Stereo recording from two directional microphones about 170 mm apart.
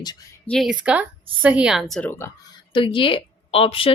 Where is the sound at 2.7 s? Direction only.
30° left (ahead or behind).